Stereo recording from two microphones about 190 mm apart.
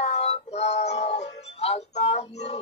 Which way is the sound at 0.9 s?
35° left (ahead or behind).